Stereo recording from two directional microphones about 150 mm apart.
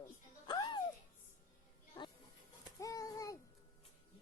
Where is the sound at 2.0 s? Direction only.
30° left (ahead or behind).